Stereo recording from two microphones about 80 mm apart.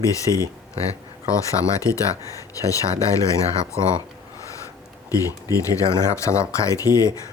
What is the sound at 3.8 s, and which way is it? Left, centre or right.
Speech, right.